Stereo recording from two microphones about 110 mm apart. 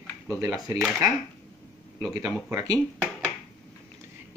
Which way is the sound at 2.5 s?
25° right (ahead or behind).